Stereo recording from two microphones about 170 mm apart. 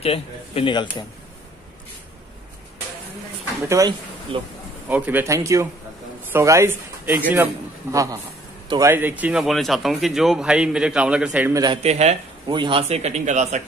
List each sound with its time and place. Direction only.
0.0 s speech: 35° left (ahead or behind)
3.6 s a man's voice: 20° right (ahead or behind)
4.3 s speech: 35° right (ahead or behind)
4.8 s a man's voice: 10° right (ahead or behind)
11.5 s a man's voice: 25° right (ahead or behind)
11.8 s speech: 40° right (ahead or behind)
12.4 s speech: 30° right (ahead or behind)